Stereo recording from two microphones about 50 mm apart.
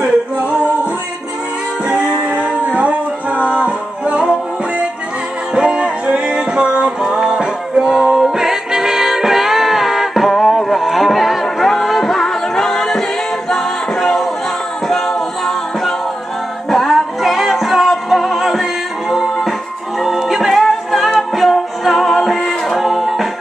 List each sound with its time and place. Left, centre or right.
0.0 s music: right
1.9 s music: right; by 23.2 s centre